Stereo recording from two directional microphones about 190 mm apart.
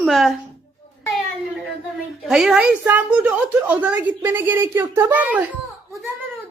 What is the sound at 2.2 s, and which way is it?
A woman's voice, centre (ahead or behind).